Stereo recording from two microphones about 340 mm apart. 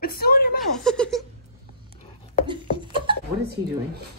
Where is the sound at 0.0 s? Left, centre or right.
Left.